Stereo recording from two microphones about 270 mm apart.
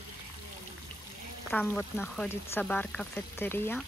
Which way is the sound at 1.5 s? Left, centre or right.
Centre.